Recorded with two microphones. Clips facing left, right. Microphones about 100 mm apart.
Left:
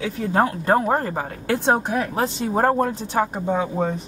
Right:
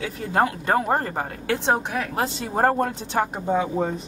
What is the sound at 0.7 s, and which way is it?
Speech, centre (ahead or behind).